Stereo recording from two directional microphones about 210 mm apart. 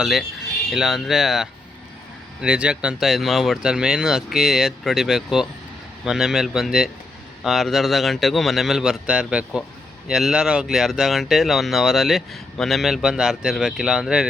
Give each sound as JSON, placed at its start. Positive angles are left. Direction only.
{"t": 0.0, "sound": "speech", "side_deg": 0}